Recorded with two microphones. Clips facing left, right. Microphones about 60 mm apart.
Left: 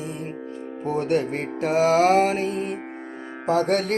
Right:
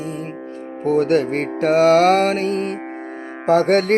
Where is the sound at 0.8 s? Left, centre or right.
Right.